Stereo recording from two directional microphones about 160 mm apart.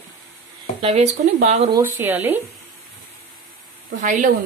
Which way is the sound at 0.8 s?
45° right (ahead or behind).